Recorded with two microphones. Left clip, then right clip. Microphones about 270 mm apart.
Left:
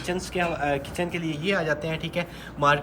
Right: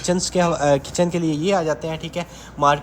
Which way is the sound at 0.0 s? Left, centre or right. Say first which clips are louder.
Right 7 dB; right.